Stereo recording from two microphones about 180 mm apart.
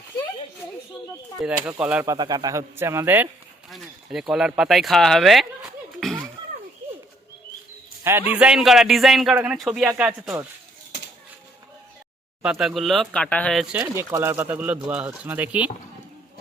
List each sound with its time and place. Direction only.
1.4 s speech: 5° right (ahead or behind)
2.0 s speech: 25° right (ahead or behind)
3.7 s speech: centre (ahead or behind)
8.0 s a man's voice: 10° right (ahead or behind)
12.4 s a man's voice: centre (ahead or behind)
13.9 s speech: 15° right (ahead or behind)